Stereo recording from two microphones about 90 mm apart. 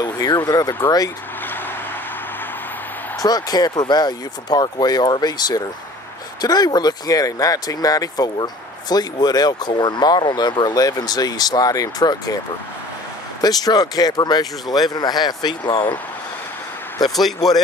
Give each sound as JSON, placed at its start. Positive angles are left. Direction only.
{"t": 0.0, "sound": "speech", "side_deg": 50}
{"t": 3.2, "sound": "speech", "side_deg": 45}
{"t": 13.4, "sound": "speech", "side_deg": 45}
{"t": 17.1, "sound": "speech", "side_deg": 0}